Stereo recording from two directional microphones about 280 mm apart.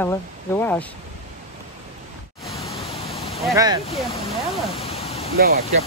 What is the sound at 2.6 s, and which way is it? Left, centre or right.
Pink noise, left.